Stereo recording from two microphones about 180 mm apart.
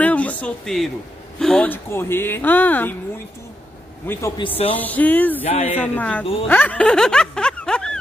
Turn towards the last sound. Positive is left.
turn(degrees=5)  # may be behind; listen again after turning